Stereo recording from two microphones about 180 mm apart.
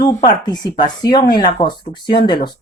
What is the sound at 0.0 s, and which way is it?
Speech, 20° left (ahead or behind).